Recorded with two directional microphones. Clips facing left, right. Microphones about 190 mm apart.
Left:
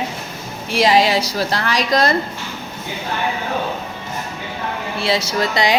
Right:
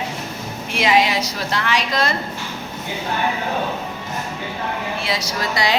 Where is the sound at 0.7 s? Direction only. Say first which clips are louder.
Left 3 dB; 35° left (ahead or behind).